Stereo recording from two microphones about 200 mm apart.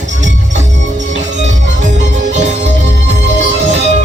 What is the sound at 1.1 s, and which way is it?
Music, 35° right (ahead or behind).